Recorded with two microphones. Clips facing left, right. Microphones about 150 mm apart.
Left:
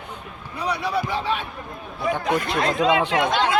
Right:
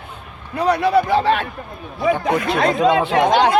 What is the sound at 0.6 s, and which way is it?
A man's voice, 60° right (ahead or behind).